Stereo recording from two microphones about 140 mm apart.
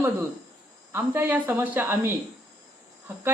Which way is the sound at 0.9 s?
15° right (ahead or behind).